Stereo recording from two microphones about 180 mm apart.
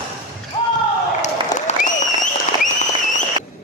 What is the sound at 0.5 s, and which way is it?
Basketball bounce, 30° left (ahead or behind).